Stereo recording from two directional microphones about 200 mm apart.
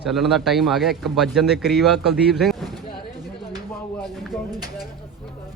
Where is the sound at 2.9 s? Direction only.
25° left (ahead or behind).